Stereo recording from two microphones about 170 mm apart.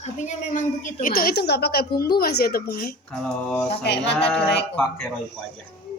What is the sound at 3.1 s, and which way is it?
Speech, 5° left (ahead or behind).